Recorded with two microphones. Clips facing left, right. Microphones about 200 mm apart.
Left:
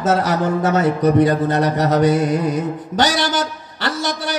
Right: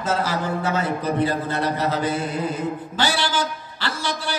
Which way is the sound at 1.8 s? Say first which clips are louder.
Left 8 dB; 75° left (ahead or behind).